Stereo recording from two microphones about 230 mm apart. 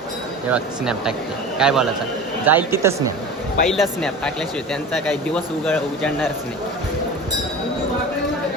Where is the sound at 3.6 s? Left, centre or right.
Centre.